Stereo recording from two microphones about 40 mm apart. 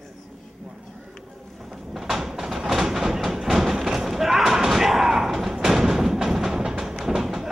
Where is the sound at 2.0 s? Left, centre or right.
Centre.